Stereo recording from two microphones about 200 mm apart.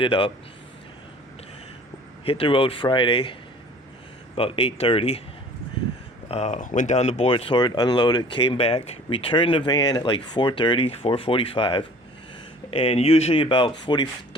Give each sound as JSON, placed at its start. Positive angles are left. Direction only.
{"t": 0.0, "sound": "speech", "side_deg": 25}
{"t": 2.2, "sound": "speech", "side_deg": 30}
{"t": 4.4, "sound": "speech", "side_deg": 30}
{"t": 6.3, "sound": "speech", "side_deg": 35}